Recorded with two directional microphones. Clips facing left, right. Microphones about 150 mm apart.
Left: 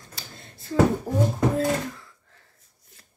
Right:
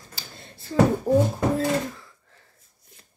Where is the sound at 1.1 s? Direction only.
25° right (ahead or behind).